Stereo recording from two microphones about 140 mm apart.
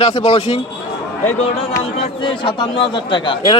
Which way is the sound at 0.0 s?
50° left (ahead or behind).